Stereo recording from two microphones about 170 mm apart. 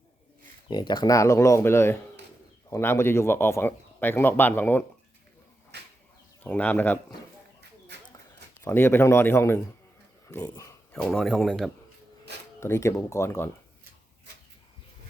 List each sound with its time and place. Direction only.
0.7 s speech: 25° left (ahead or behind)
5.7 s a sound: 75° right (ahead or behind)
6.4 s speech: 10° left (ahead or behind)
8.6 s speech: 15° left (ahead or behind)
10.9 s speech: centre (ahead or behind)
12.5 s speech: 15° left (ahead or behind)